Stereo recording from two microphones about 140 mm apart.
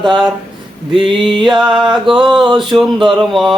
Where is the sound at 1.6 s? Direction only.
5° right (ahead or behind).